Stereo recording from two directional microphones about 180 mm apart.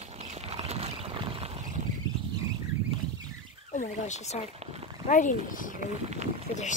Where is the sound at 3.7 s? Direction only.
40° left (ahead or behind).